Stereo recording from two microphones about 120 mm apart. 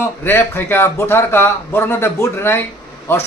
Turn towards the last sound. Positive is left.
turn(degrees=20)  # may be behind; listen again after turning